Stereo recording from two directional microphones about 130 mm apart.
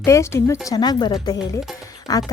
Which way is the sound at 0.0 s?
20° left (ahead or behind).